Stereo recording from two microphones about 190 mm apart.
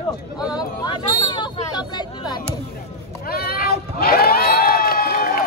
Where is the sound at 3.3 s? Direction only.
55° left (ahead or behind).